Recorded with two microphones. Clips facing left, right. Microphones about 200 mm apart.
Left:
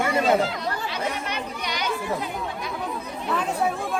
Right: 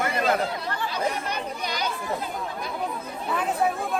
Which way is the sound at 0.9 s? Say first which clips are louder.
Right 1 dB; 35° right (ahead or behind).